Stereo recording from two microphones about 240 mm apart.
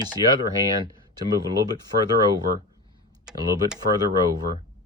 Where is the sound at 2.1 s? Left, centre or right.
Centre.